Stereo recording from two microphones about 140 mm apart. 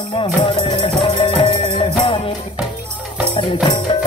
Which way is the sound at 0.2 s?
40° left (ahead or behind).